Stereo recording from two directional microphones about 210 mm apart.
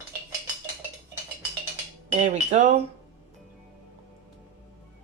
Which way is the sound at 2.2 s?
35° right (ahead or behind).